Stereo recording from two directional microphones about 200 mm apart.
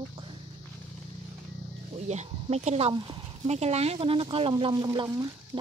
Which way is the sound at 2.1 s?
35° right (ahead or behind).